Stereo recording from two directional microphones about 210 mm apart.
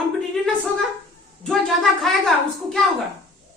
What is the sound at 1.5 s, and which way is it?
A woman's voice, 5° left (ahead or behind).